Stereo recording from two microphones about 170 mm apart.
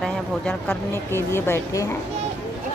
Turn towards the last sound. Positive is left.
turn(degrees=15)  # may be behind; listen again after turning